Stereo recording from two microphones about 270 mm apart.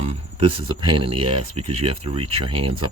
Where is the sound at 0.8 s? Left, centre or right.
Right.